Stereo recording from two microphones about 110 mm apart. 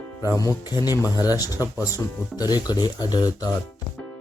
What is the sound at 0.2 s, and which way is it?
Speech, 30° left (ahead or behind).